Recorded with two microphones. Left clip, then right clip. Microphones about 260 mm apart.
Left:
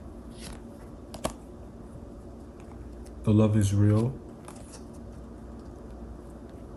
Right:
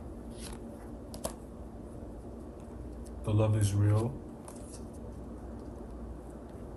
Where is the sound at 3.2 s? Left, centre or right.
Left.